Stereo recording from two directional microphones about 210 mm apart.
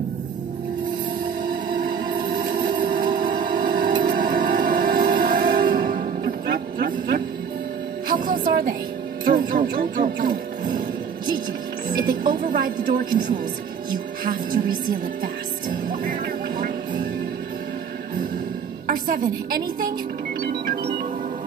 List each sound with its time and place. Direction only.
1.4 s music: 40° right (ahead or behind)
11.9 s music: 40° right (ahead or behind)
14.2 s music: 40° right (ahead or behind)
18.9 s a woman's voice: 40° right (ahead or behind)
20.4 s music: 45° right (ahead or behind)